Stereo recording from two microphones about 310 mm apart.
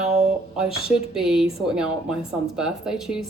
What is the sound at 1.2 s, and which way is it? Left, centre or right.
A woman's voice, centre.